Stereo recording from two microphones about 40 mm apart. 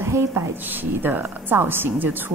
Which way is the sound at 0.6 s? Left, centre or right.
Right.